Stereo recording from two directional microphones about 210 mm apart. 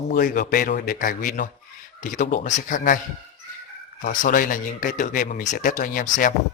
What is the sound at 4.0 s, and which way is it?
A man's voice, 40° left (ahead or behind).